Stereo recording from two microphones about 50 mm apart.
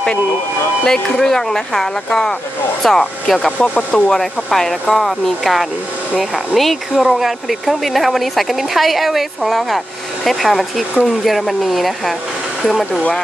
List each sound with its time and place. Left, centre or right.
0.8 s speech: centre
3.5 s speech: left
3.9 s speech: centre